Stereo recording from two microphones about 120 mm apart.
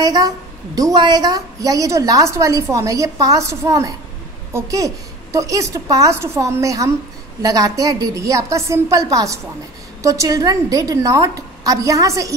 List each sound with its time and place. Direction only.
0.0 s a woman's voice: 35° right (ahead or behind)